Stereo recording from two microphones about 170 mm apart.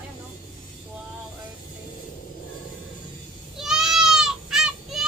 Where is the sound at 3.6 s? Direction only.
5° right (ahead or behind).